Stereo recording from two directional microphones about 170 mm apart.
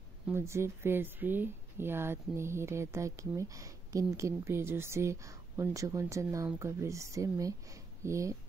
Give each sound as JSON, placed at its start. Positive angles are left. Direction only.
{"t": 0.3, "sound": "speech", "side_deg": -15}